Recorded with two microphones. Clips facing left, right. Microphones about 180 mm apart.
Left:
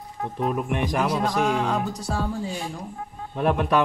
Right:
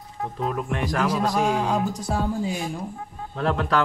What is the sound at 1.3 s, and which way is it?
Speech, 10° right (ahead or behind).